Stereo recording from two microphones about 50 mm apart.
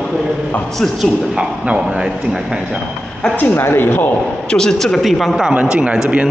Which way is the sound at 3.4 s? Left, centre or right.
Left.